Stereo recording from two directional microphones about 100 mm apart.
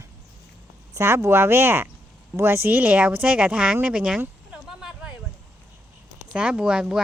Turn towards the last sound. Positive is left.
turn(degrees=-5)  # may be behind; listen again after turning